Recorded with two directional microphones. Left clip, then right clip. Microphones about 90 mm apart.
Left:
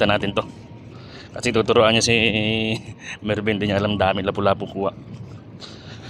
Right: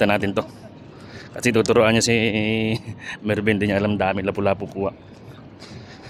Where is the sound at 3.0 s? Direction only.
35° right (ahead or behind).